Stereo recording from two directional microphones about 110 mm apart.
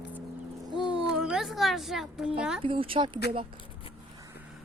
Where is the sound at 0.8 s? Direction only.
10° right (ahead or behind).